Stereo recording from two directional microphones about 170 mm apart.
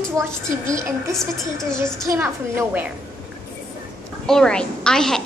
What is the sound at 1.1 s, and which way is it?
Speech, centre (ahead or behind).